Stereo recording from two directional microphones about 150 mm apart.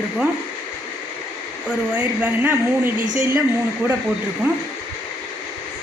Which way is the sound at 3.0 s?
60° right (ahead or behind).